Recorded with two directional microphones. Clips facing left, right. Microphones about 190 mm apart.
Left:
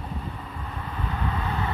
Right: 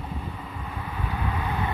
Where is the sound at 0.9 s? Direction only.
10° right (ahead or behind).